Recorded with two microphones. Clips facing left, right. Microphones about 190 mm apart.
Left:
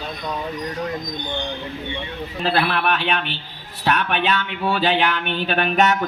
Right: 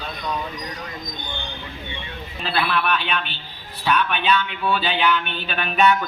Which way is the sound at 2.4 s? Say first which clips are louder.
Left 2 dB; 65° left (ahead or behind).